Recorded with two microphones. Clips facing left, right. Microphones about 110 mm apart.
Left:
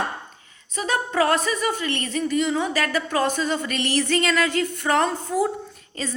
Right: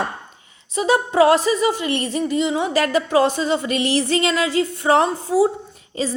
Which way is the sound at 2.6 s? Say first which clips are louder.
Right 5 dB; 40° right (ahead or behind).